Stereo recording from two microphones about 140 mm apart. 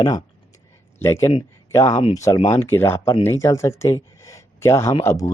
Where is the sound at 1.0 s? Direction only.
20° left (ahead or behind).